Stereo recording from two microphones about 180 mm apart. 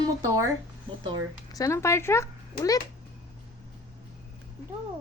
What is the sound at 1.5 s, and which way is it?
A child's voice, 15° left (ahead or behind).